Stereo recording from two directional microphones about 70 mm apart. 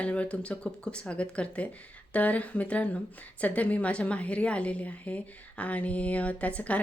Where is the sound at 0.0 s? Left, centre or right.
Centre.